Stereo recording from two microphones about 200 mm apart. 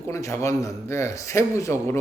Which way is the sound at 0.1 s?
15° left (ahead or behind).